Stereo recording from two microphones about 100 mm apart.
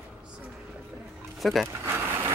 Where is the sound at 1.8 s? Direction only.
25° right (ahead or behind).